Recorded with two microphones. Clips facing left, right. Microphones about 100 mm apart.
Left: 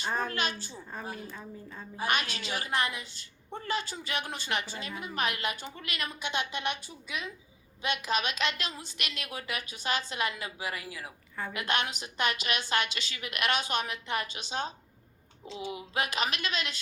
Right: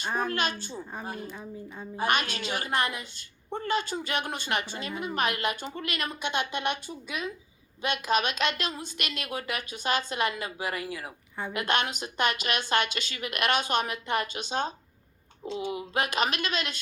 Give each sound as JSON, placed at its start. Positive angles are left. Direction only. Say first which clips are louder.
{"t": 0.7, "sound": "speech", "louder": "right 4 dB", "side_deg": -15}
{"t": 1.0, "sound": "a woman's voice", "louder": "right 1 dB", "side_deg": -50}
{"t": 1.3, "sound": "speech", "louder": "right 3 dB", "side_deg": -15}
{"t": 2.0, "sound": "a woman's voice", "louder": "right 4 dB", "side_deg": -50}